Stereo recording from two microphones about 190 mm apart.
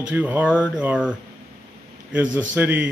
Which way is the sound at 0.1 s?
10° right (ahead or behind).